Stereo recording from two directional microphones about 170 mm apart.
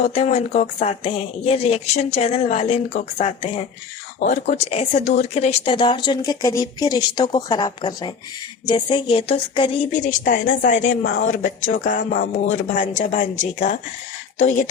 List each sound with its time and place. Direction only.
0.0 s speech: 40° left (ahead or behind)
9.9 s a woman's voice: 45° left (ahead or behind)
10.8 s speech: 90° left
11.8 s a woman's voice: 50° left (ahead or behind)